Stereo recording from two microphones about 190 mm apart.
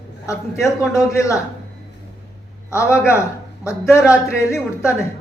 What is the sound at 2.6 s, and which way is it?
Speech, 15° left (ahead or behind).